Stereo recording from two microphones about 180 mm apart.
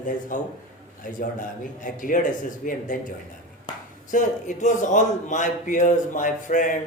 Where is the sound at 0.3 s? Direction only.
50° left (ahead or behind).